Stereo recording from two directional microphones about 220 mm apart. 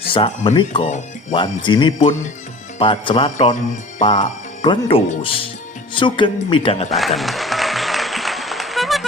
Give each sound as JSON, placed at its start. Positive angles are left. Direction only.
{"t": 0.1, "sound": "speech", "side_deg": 20}
{"t": 6.9, "sound": "applause", "side_deg": 0}